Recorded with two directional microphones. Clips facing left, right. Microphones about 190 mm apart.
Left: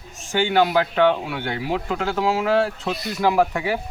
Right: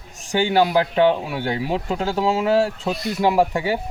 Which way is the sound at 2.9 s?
Centre (ahead or behind).